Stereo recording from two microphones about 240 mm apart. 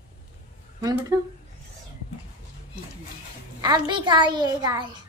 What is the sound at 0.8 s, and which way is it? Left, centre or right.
Speech, centre.